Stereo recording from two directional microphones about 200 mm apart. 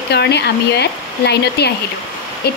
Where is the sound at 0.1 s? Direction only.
55° left (ahead or behind).